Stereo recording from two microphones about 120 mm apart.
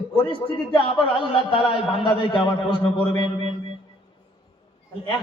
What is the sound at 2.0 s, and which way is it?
Speech, 45° left (ahead or behind).